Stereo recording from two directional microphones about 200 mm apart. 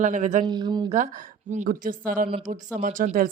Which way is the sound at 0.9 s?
40° right (ahead or behind).